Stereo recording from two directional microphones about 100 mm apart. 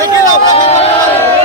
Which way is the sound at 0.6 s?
75° left (ahead or behind).